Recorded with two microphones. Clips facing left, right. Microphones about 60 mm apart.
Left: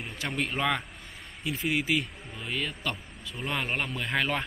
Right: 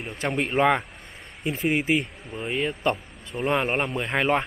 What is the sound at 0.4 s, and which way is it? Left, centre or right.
Speech, right.